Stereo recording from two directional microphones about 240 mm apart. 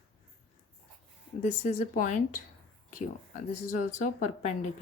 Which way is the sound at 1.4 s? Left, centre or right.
Left.